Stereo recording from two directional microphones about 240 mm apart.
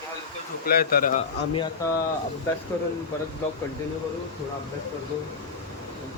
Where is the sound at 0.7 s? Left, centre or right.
Left.